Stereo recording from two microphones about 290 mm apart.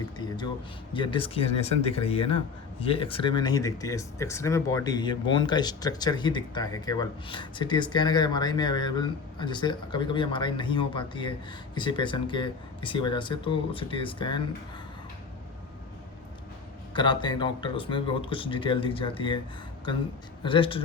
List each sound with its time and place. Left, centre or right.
0.2 s speech: centre
16.9 s speech: centre
20.4 s speech: centre